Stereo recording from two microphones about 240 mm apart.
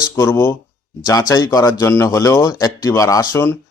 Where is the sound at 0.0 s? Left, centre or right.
Centre.